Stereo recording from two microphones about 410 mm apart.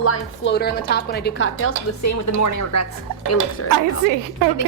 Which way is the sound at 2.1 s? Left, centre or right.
Left.